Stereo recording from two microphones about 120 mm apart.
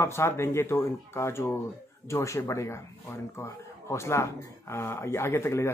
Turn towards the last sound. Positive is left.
turn(degrees=20)  # may be behind; listen again after turning